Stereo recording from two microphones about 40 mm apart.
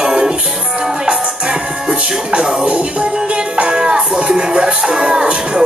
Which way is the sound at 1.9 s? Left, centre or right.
Right.